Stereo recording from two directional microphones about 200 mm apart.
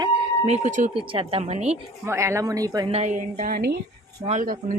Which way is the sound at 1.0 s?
25° right (ahead or behind).